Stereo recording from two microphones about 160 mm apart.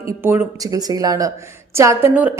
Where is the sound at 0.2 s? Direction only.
15° right (ahead or behind).